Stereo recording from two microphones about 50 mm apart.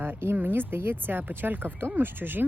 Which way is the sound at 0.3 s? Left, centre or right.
Right.